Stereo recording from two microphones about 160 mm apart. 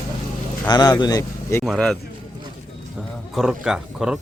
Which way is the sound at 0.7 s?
25° left (ahead or behind).